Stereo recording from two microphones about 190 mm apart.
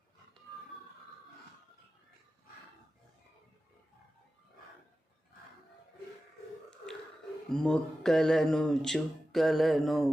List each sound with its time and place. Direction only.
7.5 s speech: 5° left (ahead or behind)